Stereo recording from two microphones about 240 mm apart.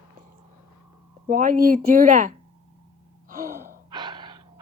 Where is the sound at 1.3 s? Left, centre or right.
Right.